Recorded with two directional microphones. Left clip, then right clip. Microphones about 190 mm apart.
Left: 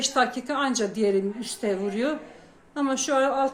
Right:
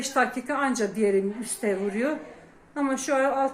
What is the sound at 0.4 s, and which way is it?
Speech, 10° left (ahead or behind).